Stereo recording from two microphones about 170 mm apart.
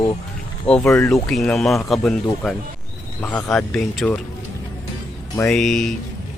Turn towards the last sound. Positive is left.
turn(degrees=0)  # may be behind; listen again after turning